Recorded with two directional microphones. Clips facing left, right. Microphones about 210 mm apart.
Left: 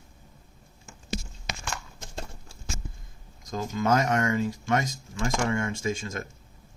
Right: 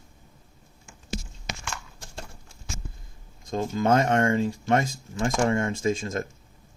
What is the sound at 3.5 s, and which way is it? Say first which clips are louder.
Speech: right 3 dB; 30° right (ahead or behind).